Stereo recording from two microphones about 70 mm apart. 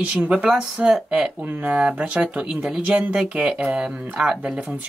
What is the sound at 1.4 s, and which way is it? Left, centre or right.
Speech, right.